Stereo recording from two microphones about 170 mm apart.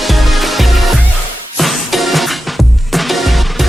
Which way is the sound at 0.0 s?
Centre (ahead or behind).